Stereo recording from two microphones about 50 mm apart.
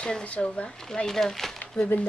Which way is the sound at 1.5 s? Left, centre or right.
Left.